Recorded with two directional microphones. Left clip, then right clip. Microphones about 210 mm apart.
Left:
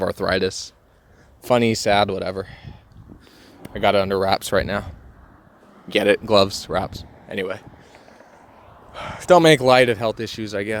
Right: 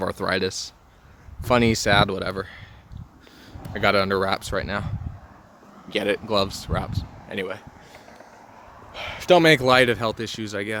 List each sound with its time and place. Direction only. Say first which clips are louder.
0.0 s speech: left 3 dB; 15° left (ahead or behind)
4.3 s speech: left 6 dB; 30° left (ahead or behind)
5.9 s speech: left 7 dB; 35° left (ahead or behind)
8.9 s speech: left 3 dB; 15° left (ahead or behind)